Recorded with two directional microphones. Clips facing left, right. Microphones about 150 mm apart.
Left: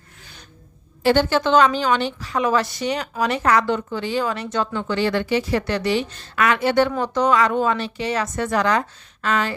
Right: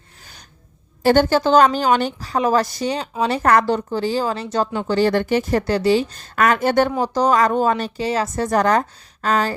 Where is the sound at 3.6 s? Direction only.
35° right (ahead or behind).